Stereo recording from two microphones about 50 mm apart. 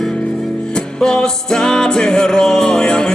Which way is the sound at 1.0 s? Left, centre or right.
Centre.